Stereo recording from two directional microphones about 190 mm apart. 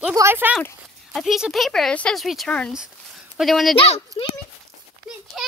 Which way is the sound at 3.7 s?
30° left (ahead or behind).